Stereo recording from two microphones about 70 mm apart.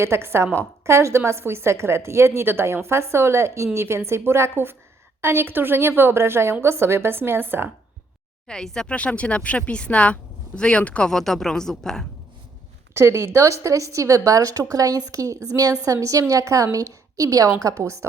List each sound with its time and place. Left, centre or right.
0.0 s a woman's voice: right
8.4 s speech: centre
12.9 s a woman's voice: right